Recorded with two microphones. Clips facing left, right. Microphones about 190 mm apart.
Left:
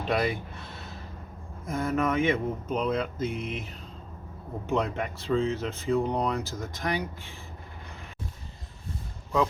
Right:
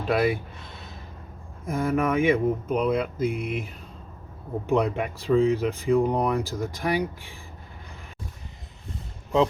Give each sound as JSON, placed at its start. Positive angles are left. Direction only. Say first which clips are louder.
{"t": 0.1, "sound": "speech", "louder": "right 4 dB", "side_deg": -5}
{"t": 1.6, "sound": "speech", "louder": "right 3 dB", "side_deg": -10}
{"t": 4.7, "sound": "speech", "louder": "right 4 dB", "side_deg": -15}